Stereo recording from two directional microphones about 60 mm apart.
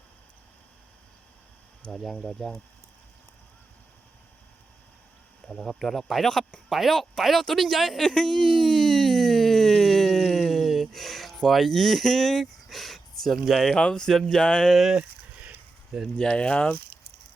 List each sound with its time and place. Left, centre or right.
1.9 s speech: centre
5.5 s speech: centre
6.7 s a sound: centre
13.5 s speech: centre
13.7 s speech: centre
14.9 s a sound: centre
16.1 s speech: centre